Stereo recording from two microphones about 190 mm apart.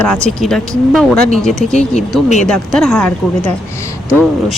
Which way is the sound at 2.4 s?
5° left (ahead or behind).